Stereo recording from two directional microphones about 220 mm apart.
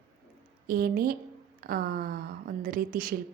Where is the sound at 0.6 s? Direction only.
45° right (ahead or behind).